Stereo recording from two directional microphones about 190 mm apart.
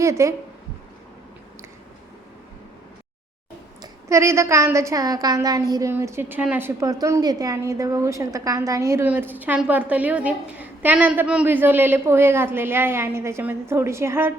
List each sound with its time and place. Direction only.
0.0 s speech: 15° right (ahead or behind)
3.8 s a woman's voice: 15° right (ahead or behind)